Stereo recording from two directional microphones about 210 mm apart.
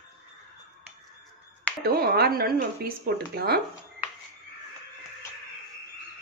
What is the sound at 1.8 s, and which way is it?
Speech, 45° right (ahead or behind).